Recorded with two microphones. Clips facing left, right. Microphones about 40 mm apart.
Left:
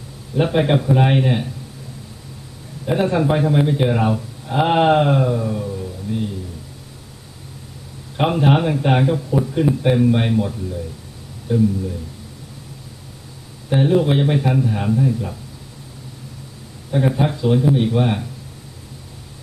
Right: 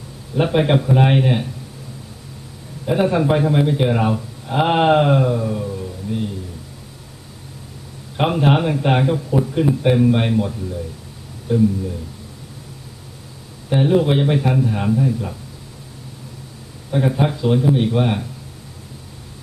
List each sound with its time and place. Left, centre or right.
0.3 s a man's voice: centre
2.8 s a man's voice: centre
8.1 s a man's voice: centre
13.7 s a man's voice: centre
17.2 s a man's voice: centre